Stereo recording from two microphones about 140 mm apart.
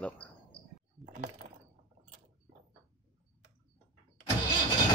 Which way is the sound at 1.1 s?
55° right (ahead or behind).